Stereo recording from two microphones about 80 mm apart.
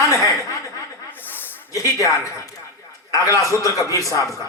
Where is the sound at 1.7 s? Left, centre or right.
Left.